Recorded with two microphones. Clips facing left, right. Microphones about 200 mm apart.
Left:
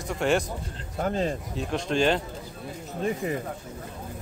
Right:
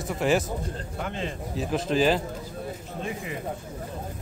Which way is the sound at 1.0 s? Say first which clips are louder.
Left 7 dB; 40° left (ahead or behind).